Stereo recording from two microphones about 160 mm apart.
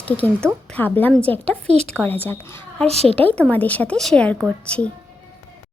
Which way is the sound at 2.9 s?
40° right (ahead or behind).